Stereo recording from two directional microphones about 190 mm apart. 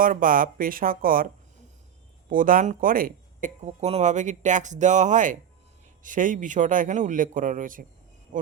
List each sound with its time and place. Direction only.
0.0 s a man's voice: 45° right (ahead or behind)
2.3 s a man's voice: 45° right (ahead or behind)